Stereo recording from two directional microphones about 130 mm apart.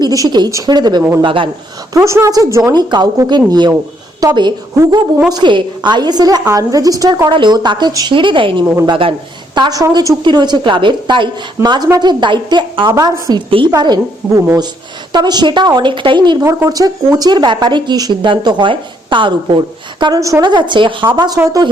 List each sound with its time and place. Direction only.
0.0 s speech: 30° right (ahead or behind)
1.9 s a woman's voice: 20° right (ahead or behind); by 9.1 s 45° right (ahead or behind)
9.6 s a woman's voice: 30° right (ahead or behind)
16.5 s a woman's voice: 25° right (ahead or behind)
20.4 s speech: 35° right (ahead or behind)